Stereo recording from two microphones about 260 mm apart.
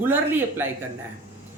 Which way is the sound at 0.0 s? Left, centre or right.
Centre.